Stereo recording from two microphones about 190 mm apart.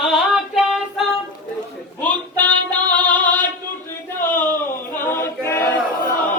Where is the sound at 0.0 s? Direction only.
Centre (ahead or behind).